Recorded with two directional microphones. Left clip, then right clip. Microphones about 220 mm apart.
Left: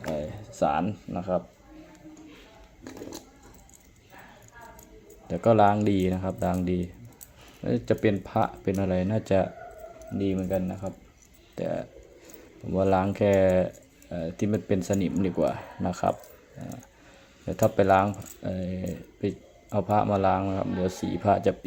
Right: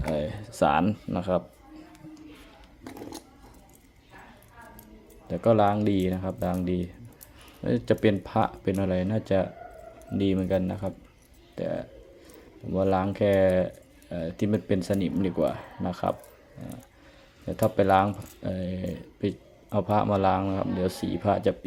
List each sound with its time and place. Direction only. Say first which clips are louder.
0.1 s speech: right 3 dB; 15° right (ahead or behind)
2.8 s a sound: even; 20° right (ahead or behind)
5.3 s speech: left 2 dB; centre (ahead or behind)
10.2 s speech: right 2 dB; 20° right (ahead or behind)
11.5 s speech: even; centre (ahead or behind)